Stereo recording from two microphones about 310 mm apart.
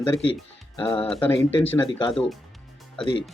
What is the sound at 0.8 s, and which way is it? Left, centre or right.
Speech, centre.